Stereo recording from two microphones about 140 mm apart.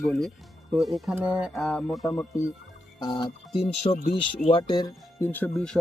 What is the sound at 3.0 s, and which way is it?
Speech, 30° left (ahead or behind).